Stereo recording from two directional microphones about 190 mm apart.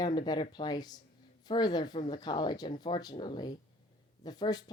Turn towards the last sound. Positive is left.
turn(degrees=20)  # may be behind; listen again after turning